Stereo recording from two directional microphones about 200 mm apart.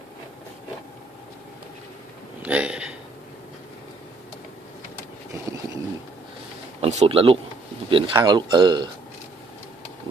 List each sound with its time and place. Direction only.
2.4 s speech: 5° right (ahead or behind)
6.8 s speech: 30° right (ahead or behind)